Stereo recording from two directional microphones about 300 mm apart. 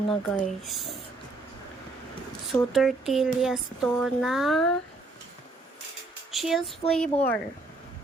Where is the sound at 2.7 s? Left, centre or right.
Centre.